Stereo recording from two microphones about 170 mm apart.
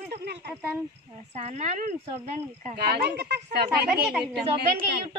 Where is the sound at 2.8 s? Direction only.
70° right (ahead or behind).